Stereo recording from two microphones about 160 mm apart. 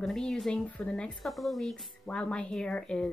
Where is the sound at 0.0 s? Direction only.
Centre (ahead or behind).